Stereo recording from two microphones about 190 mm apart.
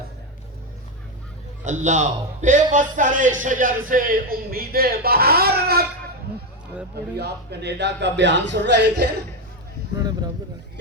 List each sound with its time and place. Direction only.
1.6 s a man's voice: 40° right (ahead or behind); by 5.8 s 55° right (ahead or behind)
7.2 s a woman's voice: 60° right (ahead or behind)
10.0 s a sound: 20° right (ahead or behind)